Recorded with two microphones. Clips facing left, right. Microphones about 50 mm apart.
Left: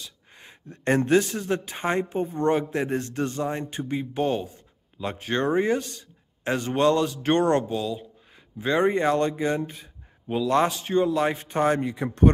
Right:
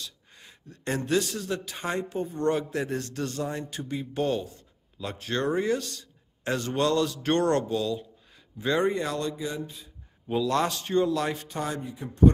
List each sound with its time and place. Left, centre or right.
0.0 s a man's voice: left
10.2 s speech: centre
11.2 s a man's voice: left
11.5 s speech: left
11.8 s speech: left